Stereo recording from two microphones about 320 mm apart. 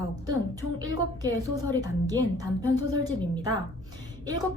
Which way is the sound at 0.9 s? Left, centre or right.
Centre.